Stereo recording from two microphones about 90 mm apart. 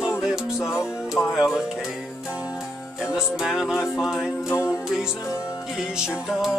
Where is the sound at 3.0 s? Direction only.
5° right (ahead or behind).